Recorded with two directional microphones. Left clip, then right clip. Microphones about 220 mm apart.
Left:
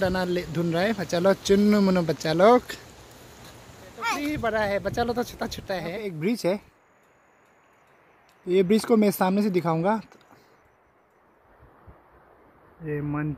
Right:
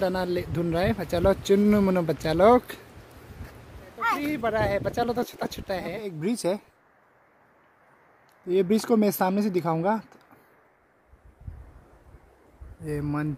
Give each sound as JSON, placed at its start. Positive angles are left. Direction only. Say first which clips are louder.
{"t": 0.0, "sound": "speech", "louder": "left 1 dB", "side_deg": -5}
{"t": 4.2, "sound": "speech", "louder": "even", "side_deg": -5}
{"t": 8.5, "sound": "speech", "louder": "left 2 dB", "side_deg": 0}
{"t": 12.8, "sound": "speech", "louder": "even", "side_deg": -5}